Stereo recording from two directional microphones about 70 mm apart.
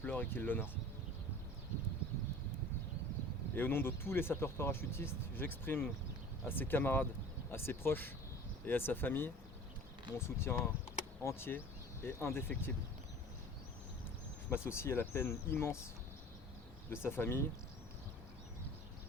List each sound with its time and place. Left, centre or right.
0.0 s speech: left
3.5 s speech: left
14.5 s speech: left
16.9 s speech: left